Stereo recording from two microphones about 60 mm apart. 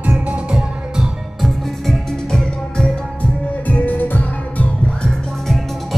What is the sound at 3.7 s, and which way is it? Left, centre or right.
Music, left.